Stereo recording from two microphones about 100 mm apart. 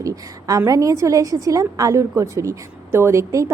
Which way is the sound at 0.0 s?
35° right (ahead or behind).